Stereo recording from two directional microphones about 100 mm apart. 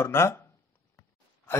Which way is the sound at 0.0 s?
25° left (ahead or behind).